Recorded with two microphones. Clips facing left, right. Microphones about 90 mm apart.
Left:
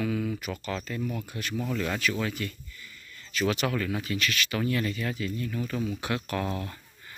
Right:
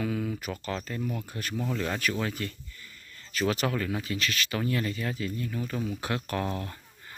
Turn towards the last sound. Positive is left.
turn(degrees=-30)  # may be behind; listen again after turning